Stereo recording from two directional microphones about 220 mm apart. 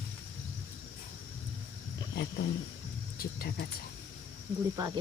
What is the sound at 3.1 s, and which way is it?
Speech, 40° left (ahead or behind).